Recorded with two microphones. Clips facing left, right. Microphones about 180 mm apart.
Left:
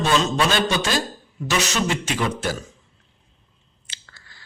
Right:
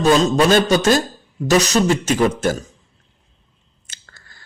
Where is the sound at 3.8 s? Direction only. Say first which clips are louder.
Right 1 dB; 45° right (ahead or behind).